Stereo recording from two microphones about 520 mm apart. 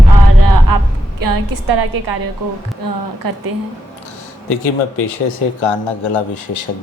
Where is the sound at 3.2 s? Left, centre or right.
Right.